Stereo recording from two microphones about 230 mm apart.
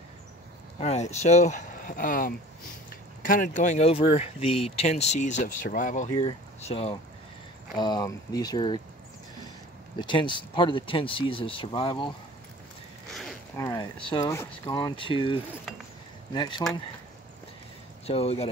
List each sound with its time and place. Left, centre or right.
0.7 s speech: left
6.1 s speech: left
9.9 s speech: left
13.1 s a sound: centre
13.6 s speech: centre
16.3 s speech: centre
18.0 s speech: left